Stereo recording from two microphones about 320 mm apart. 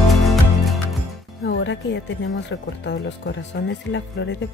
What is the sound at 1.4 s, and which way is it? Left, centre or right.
Speech, left.